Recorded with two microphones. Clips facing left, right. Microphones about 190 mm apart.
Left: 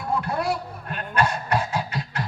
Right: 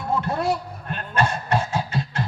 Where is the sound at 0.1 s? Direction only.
25° right (ahead or behind).